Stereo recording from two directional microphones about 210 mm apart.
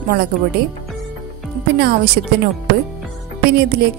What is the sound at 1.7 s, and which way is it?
Speech, 45° right (ahead or behind).